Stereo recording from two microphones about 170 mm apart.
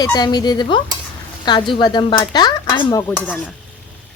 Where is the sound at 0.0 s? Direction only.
25° left (ahead or behind); by 3.5 s 10° left (ahead or behind).